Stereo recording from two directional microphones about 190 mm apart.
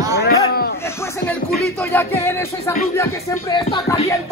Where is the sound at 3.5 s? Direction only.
25° left (ahead or behind).